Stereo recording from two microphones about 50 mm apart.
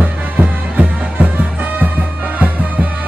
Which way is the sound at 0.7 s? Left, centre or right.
Right.